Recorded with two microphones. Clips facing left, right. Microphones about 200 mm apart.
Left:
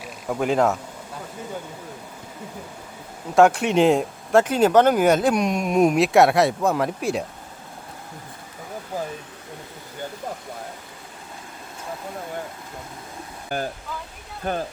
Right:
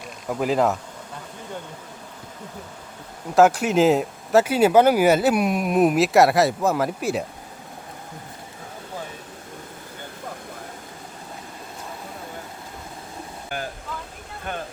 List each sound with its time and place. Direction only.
0.0 s speech: centre (ahead or behind)
3.3 s speech: centre (ahead or behind)
13.5 s speech: 40° left (ahead or behind)